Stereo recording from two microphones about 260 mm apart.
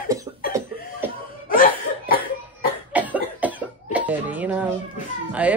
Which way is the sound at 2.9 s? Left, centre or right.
Centre.